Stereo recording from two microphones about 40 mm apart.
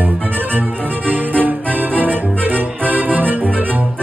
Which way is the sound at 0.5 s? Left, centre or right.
Right.